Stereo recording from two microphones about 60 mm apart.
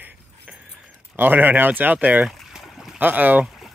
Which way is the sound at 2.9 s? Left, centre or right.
Right.